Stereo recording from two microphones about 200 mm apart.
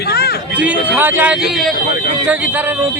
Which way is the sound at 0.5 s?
5° right (ahead or behind).